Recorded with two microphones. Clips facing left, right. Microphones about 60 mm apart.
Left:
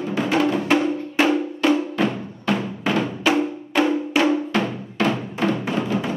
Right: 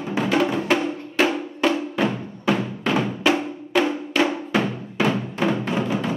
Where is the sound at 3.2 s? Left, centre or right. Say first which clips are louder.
Left 1 dB; centre.